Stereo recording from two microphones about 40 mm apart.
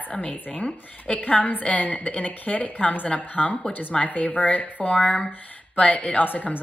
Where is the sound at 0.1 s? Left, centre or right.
Left.